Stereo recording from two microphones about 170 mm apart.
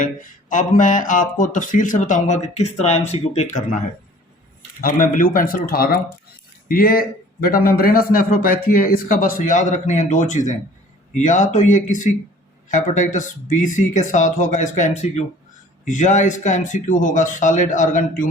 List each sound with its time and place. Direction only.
0.0 s speech: 50° left (ahead or behind)
4.8 s a man's voice: 55° left (ahead or behind)